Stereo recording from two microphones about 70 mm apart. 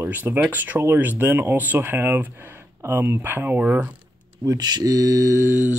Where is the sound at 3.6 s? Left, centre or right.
Centre.